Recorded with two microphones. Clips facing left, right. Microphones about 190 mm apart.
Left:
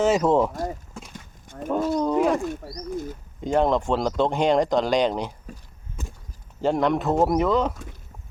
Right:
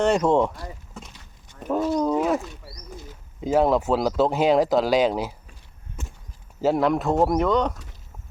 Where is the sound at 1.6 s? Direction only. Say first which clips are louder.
Right 1 dB; centre (ahead or behind).